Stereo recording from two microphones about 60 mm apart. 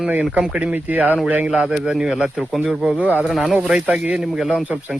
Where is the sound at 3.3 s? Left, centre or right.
Centre.